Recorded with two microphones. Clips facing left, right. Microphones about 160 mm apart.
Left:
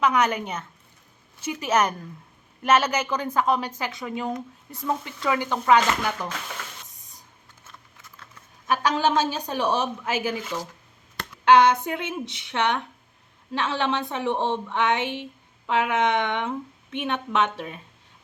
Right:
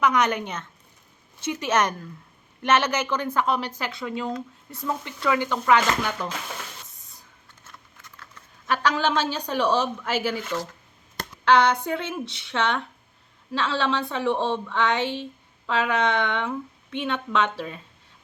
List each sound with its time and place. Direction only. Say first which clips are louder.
0.0 s a woman's voice: even; 10° left (ahead or behind)
8.1 s typing: right 1 dB; 20° left (ahead or behind)
9.4 s speech: right 2 dB; 20° left (ahead or behind)
10.4 s a woman's voice: right 2 dB; 10° left (ahead or behind)